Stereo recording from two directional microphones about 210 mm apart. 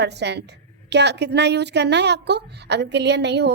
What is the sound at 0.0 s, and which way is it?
A woman's voice, 55° right (ahead or behind).